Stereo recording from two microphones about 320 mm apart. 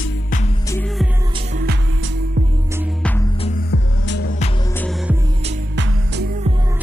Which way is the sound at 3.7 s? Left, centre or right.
Left.